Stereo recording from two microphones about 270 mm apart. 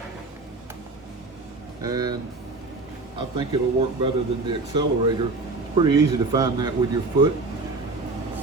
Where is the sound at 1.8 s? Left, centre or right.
Centre.